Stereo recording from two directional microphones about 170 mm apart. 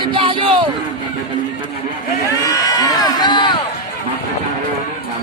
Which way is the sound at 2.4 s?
20° left (ahead or behind).